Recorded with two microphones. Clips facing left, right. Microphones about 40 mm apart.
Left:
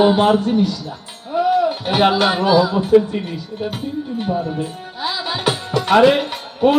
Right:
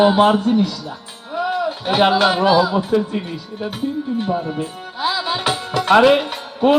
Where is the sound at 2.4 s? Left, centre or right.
Centre.